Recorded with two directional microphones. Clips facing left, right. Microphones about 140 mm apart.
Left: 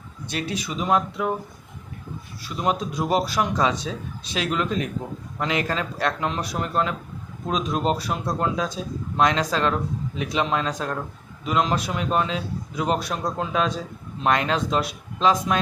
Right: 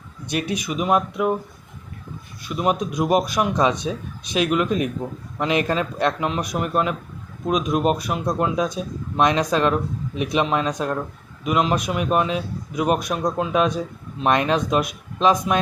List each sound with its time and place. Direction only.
0.3 s speech: 15° right (ahead or behind)
2.4 s a man's voice: 15° right (ahead or behind)